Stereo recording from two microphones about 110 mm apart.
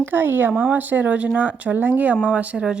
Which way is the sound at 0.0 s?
20° right (ahead or behind).